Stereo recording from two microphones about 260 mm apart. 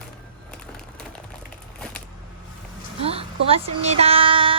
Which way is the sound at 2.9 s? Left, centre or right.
Right.